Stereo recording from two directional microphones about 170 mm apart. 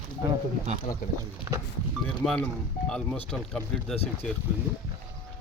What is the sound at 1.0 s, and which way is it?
Speech, 55° left (ahead or behind).